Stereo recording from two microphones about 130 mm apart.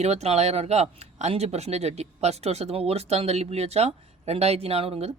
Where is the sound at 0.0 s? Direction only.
55° right (ahead or behind).